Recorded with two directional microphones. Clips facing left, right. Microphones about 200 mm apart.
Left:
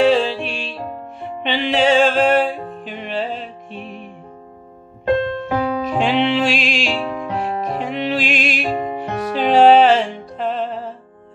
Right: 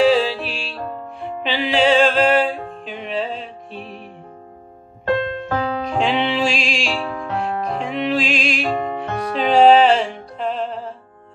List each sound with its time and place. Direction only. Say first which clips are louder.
0.0 s music: left 1 dB; centre (ahead or behind)
5.5 s music: left 2 dB; 5° left (ahead or behind)
7.0 s music: left 2 dB; 20° left (ahead or behind)
7.7 s music: right 2 dB; centre (ahead or behind)
8.6 s music: even; 20° left (ahead or behind)
9.0 s music: left 1 dB; centre (ahead or behind)